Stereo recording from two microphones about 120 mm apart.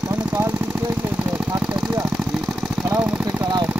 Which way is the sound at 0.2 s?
15° right (ahead or behind).